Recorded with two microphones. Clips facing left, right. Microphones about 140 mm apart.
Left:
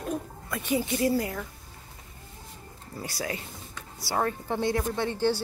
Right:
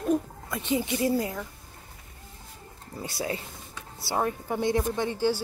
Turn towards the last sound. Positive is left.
turn(degrees=-10)  # may be behind; listen again after turning